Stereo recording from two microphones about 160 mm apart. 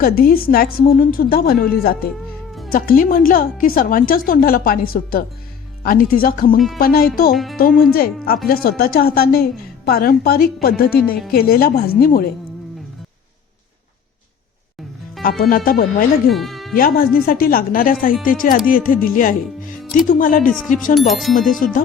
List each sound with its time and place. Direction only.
0.0 s a woman's voice: 65° left (ahead or behind)
15.2 s a woman's voice: 65° left (ahead or behind)
16.3 s music: centre (ahead or behind)
16.7 s a woman's voice: 65° left (ahead or behind)
20.9 s speech: centre (ahead or behind)
21.6 s music: 55° left (ahead or behind)